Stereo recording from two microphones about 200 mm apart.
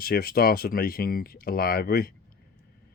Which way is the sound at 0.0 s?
50° left (ahead or behind).